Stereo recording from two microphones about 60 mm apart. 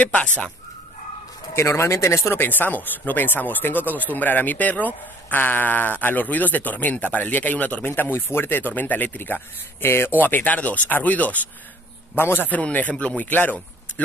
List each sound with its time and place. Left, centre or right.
0.0 s a man's voice: left
1.5 s speech: left
2.3 s a man's voice: left
10.1 s a man's voice: left
12.2 s speech: left
13.0 s a man's voice: left